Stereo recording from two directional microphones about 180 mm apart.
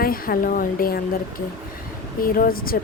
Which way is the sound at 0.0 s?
55° left (ahead or behind).